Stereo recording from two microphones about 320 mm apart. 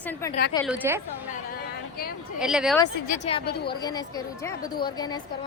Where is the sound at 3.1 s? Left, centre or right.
Left.